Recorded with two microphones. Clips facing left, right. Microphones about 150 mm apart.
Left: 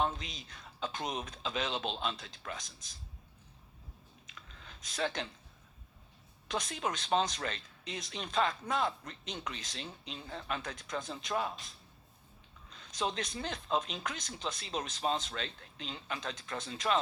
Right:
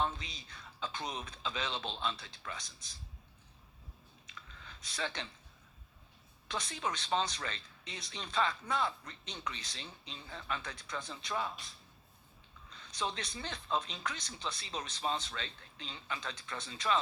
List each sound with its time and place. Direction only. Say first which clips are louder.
0.0 s a man's voice: left 2 dB; 45° left (ahead or behind)
4.7 s speech: left 5 dB; 50° left (ahead or behind)
6.5 s speech: left 3 dB; 50° left (ahead or behind)
12.7 s a sound: left 3 dB; 45° left (ahead or behind)
13.1 s speech: left 5 dB; 50° left (ahead or behind)